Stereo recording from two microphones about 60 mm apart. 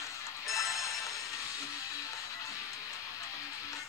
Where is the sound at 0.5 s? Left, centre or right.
Left.